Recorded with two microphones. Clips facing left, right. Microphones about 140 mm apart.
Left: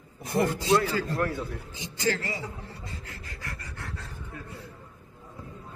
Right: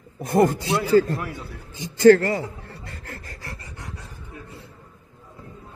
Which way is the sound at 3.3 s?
35° right (ahead or behind).